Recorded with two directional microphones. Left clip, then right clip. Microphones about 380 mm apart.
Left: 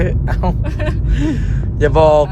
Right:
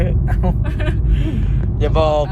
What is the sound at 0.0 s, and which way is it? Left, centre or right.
Vehicle, left.